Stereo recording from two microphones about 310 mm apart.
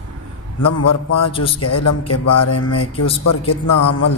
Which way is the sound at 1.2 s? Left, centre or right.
Centre.